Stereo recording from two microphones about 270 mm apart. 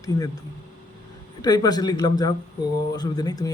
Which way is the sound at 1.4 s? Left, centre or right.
Centre.